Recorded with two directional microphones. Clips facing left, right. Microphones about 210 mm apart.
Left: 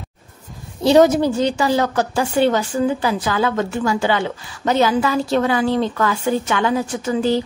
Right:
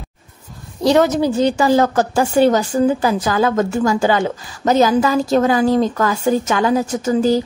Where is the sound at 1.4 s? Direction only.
45° right (ahead or behind).